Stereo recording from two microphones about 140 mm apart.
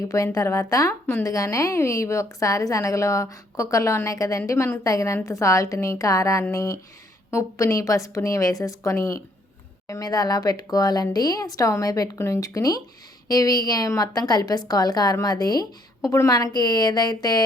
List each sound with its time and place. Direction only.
0.1 s a woman's voice: 20° left (ahead or behind)